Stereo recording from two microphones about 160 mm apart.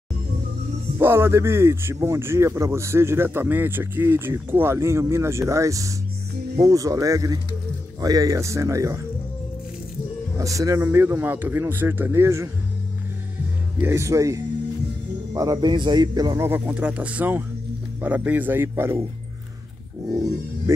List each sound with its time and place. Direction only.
0.9 s a man's voice: 15° right (ahead or behind)
10.3 s a man's voice: 20° right (ahead or behind)
13.7 s a man's voice: 15° right (ahead or behind)
16.4 s a man's voice: 15° right (ahead or behind)